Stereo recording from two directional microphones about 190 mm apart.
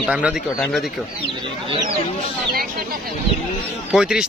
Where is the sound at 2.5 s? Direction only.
50° right (ahead or behind).